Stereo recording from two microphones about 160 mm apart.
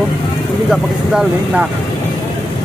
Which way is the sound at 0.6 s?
5° right (ahead or behind).